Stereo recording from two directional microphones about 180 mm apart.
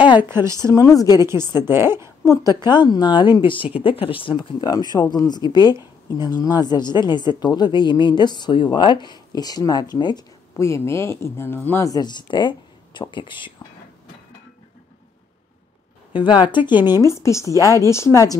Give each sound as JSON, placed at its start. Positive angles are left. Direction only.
{"t": 0.2, "sound": "a woman's voice", "side_deg": -15}
{"t": 0.7, "sound": "a woman's voice", "side_deg": 20}
{"t": 1.2, "sound": "a woman's voice", "side_deg": -15}
{"t": 2.2, "sound": "a woman's voice", "side_deg": 20}
{"t": 16.1, "sound": "a woman's voice", "side_deg": 25}